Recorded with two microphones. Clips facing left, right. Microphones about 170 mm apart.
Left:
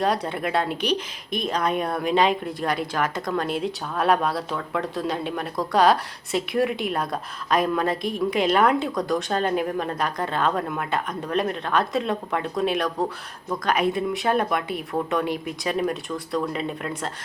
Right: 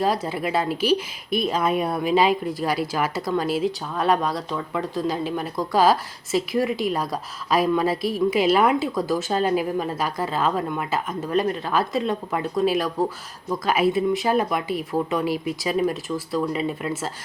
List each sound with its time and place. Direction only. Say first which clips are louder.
0.0 s a woman's voice: right 1 dB; centre (ahead or behind)